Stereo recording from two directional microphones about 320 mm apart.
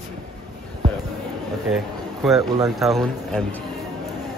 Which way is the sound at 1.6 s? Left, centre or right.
Centre.